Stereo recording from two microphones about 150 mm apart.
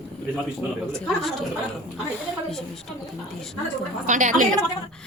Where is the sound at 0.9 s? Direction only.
Centre (ahead or behind).